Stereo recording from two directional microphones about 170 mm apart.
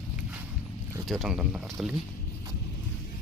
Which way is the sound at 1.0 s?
Centre (ahead or behind).